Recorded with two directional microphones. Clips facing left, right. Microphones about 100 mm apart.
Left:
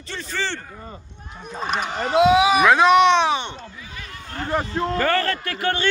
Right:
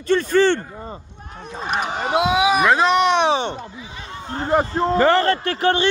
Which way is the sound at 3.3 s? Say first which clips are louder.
Right 4 dB; 35° right (ahead or behind).